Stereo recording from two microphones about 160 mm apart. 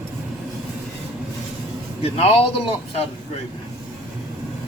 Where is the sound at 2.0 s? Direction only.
40° left (ahead or behind).